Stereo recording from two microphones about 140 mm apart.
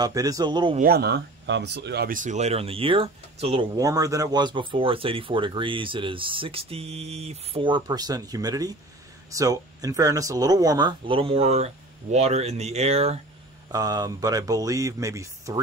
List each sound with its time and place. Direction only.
0.0 s speech: 25° right (ahead or behind)
0.7 s speech: 90° right
2.0 s speech: 65° right (ahead or behind); by 3.6 s 45° right (ahead or behind)
3.7 s speech: 25° right (ahead or behind); by 13.2 s 50° right (ahead or behind)
13.7 s speech: 25° right (ahead or behind)